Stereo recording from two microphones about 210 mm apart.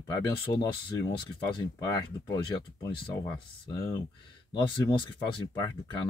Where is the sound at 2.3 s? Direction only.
20° left (ahead or behind).